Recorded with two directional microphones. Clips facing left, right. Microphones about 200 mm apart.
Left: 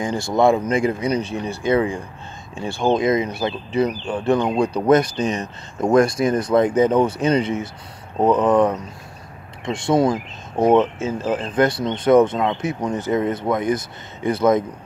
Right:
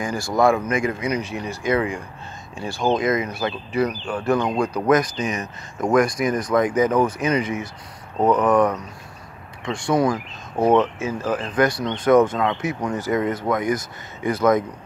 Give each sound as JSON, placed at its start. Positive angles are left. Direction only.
{"t": 0.0, "sound": "speech", "side_deg": 25}